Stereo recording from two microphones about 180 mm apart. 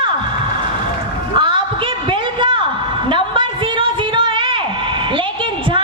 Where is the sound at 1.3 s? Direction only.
25° right (ahead or behind).